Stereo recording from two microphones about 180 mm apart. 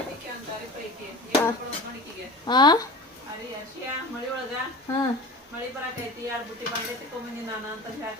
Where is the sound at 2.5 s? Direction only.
25° left (ahead or behind).